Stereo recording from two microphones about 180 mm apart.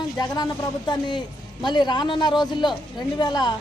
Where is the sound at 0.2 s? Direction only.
20° left (ahead or behind).